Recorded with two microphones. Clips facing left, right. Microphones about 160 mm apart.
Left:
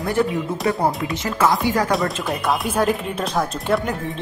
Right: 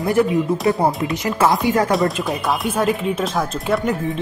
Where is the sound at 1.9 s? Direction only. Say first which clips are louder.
Right 3 dB; centre (ahead or behind).